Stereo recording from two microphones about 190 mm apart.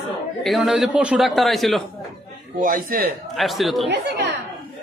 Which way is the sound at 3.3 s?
Centre (ahead or behind).